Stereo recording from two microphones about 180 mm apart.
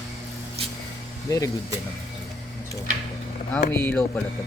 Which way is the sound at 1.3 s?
20° left (ahead or behind).